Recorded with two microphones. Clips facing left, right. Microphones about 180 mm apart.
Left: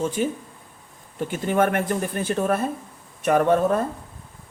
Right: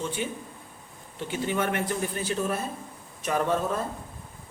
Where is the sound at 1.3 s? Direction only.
50° left (ahead or behind).